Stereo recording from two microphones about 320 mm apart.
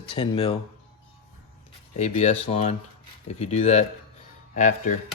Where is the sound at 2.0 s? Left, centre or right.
Centre.